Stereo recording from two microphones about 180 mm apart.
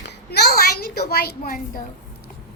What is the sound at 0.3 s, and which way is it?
A woman's voice, 65° left (ahead or behind).